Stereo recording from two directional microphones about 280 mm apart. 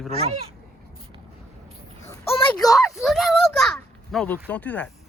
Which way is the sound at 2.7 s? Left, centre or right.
Centre.